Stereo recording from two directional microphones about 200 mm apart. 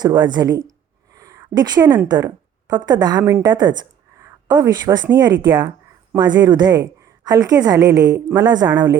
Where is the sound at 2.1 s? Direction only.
20° right (ahead or behind).